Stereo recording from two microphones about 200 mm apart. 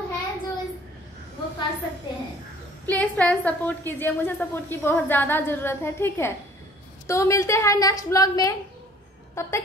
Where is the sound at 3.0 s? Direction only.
5° left (ahead or behind).